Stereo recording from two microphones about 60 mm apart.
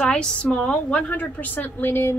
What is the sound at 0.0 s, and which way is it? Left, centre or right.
A woman's voice, centre.